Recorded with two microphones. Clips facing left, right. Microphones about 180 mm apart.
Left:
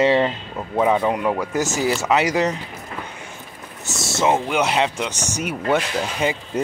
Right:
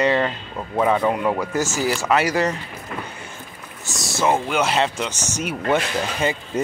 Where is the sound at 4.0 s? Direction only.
25° left (ahead or behind).